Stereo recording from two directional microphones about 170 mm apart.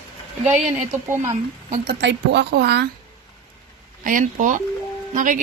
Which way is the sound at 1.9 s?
90° right.